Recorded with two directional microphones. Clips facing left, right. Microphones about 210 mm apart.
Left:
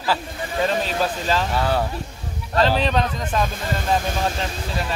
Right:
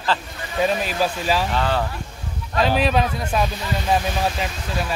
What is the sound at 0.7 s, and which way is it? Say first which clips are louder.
Speech: right 1 dB; 10° right (ahead or behind).